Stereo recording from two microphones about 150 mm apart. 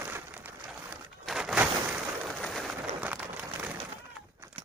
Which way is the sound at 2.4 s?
Centre (ahead or behind).